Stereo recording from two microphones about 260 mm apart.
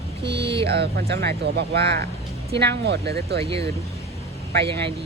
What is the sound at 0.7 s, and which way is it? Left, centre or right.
Speech, right.